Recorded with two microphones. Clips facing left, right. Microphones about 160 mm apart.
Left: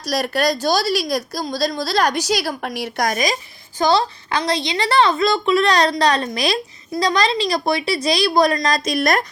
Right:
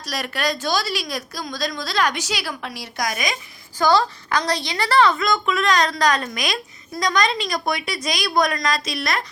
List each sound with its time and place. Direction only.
0.0 s a woman's voice: 40° left (ahead or behind); by 3.2 s 55° left (ahead or behind)
3.8 s a woman's voice: 20° left (ahead or behind); by 9.2 s 50° left (ahead or behind)